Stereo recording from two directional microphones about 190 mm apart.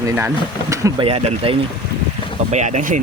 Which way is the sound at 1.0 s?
30° right (ahead or behind).